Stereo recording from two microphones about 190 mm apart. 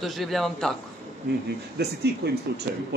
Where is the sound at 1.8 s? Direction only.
60° right (ahead or behind).